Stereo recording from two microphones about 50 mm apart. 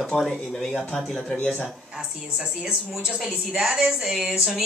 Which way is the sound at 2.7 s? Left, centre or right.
Centre.